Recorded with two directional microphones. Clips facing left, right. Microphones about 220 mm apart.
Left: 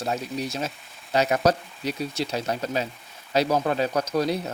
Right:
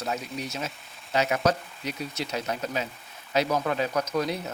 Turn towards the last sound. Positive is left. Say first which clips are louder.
# left 3 dB
turn(degrees=35)  # may be behind; listen again after turning